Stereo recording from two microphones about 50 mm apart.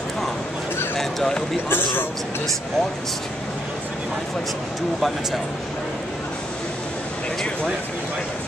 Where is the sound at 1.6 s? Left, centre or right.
Left.